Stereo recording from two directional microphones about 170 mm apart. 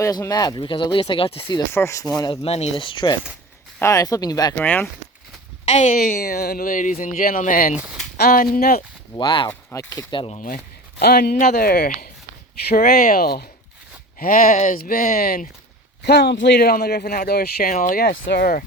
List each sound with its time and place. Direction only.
0.0 s speech: 20° left (ahead or behind)
1.7 s speech: 15° left (ahead or behind)
2.3 s speech: 35° left (ahead or behind)
4.5 s speech: 10° left (ahead or behind)
5.6 s a woman's voice: 45° left (ahead or behind)
7.8 s speech: 5° right (ahead or behind)
8.1 s speech: 60° left (ahead or behind)
9.1 s speech: 30° left (ahead or behind)
9.5 s speech: 15° left (ahead or behind)
10.2 s speech: 35° left (ahead or behind)
11.0 s speech: 65° left (ahead or behind)
14.2 s speech: 55° left (ahead or behind)
16.0 s speech: 80° left; by 18.6 s 65° left (ahead or behind)